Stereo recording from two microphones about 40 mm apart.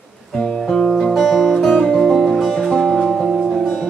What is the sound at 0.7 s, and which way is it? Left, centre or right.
Music, centre.